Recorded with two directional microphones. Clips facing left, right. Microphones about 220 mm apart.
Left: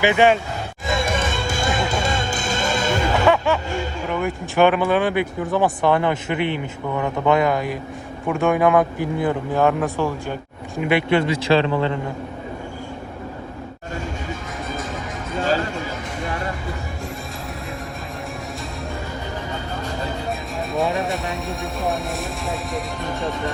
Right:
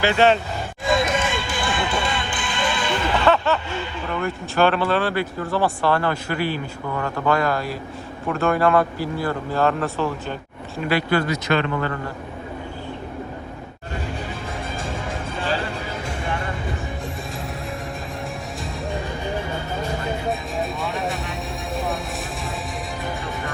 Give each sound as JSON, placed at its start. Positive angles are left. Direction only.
{"t": 0.0, "sound": "speech", "side_deg": 15}
{"t": 1.5, "sound": "music", "side_deg": 45}
{"t": 3.2, "sound": "music", "side_deg": 15}
{"t": 4.1, "sound": "speech", "side_deg": 15}
{"t": 20.6, "sound": "music", "side_deg": 0}